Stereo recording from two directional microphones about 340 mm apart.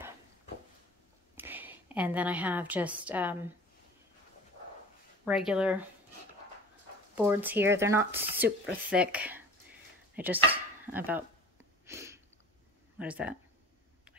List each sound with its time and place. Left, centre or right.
1.3 s a woman's voice: centre
5.2 s a woman's voice: centre
7.2 s a woman's voice: centre
11.8 s a sound: centre
13.0 s a woman's voice: centre